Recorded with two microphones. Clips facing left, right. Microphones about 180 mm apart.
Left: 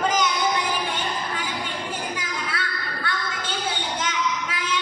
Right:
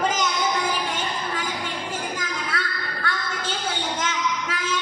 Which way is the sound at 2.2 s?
45° right (ahead or behind).